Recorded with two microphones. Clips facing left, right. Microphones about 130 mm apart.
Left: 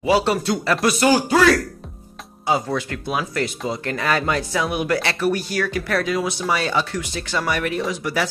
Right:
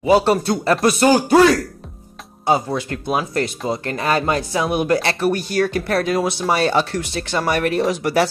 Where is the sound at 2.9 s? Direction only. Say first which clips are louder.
Right 3 dB; 35° right (ahead or behind).